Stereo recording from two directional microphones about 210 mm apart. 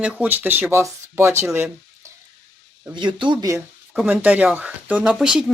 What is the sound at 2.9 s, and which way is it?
Speech, 20° right (ahead or behind).